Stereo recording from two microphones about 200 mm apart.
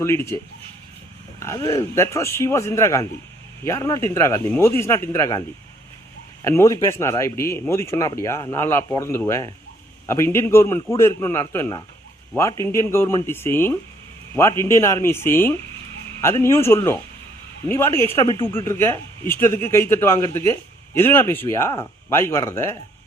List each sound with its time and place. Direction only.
0.0 s speech: 15° left (ahead or behind)
1.4 s speech: 15° left (ahead or behind)
6.4 s speech: 15° left (ahead or behind)